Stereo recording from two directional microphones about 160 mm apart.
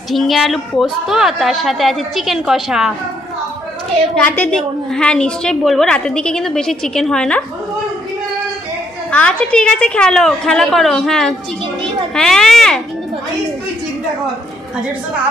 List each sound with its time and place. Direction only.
0.1 s a woman's voice: centre (ahead or behind)
4.1 s a woman's voice: 5° left (ahead or behind)
9.1 s a woman's voice: 5° left (ahead or behind)